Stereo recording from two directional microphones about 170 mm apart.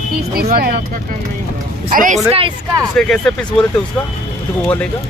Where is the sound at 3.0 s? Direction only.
5° left (ahead or behind).